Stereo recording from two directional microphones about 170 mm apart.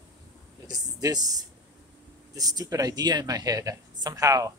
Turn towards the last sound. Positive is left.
turn(degrees=-20)  # may be behind; listen again after turning